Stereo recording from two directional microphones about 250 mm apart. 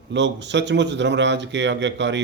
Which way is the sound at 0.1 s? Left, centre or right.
Right.